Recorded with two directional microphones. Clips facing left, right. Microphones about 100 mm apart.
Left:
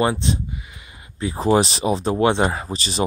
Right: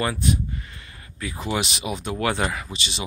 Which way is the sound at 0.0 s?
25° left (ahead or behind).